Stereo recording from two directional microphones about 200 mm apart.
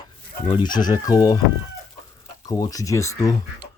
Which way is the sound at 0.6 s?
20° left (ahead or behind).